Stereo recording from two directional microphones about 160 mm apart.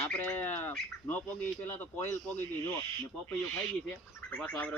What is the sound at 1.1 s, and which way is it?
Speech, 10° left (ahead or behind).